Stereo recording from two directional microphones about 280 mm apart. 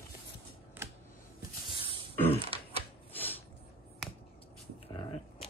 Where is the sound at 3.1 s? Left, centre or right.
Centre.